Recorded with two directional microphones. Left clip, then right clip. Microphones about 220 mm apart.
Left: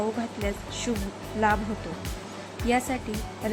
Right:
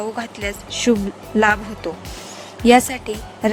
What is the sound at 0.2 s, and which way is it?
A woman's voice, 40° right (ahead or behind).